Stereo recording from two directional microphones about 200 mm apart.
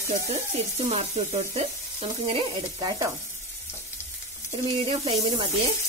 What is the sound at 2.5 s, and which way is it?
Sizzle, 15° right (ahead or behind).